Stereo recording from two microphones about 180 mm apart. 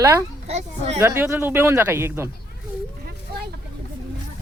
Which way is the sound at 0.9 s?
15° right (ahead or behind).